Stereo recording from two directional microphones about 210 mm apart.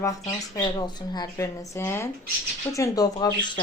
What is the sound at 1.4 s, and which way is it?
Speech, 10° left (ahead or behind).